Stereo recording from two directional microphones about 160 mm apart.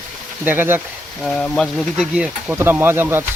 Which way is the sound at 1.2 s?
Centre (ahead or behind).